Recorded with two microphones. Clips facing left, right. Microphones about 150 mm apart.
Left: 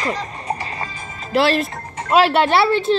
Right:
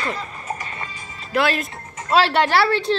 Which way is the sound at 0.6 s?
35° left (ahead or behind).